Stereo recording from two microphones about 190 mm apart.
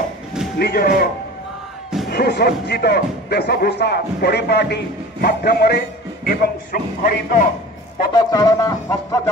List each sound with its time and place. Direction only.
0.6 s speech: 55° left (ahead or behind)
8.1 s speech: 20° left (ahead or behind)